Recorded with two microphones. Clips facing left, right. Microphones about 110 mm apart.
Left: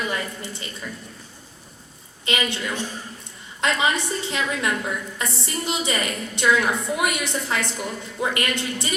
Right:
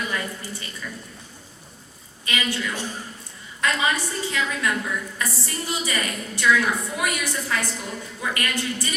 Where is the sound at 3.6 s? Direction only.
20° left (ahead or behind).